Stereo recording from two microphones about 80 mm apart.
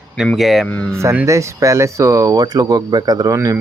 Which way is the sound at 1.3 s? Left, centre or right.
Right.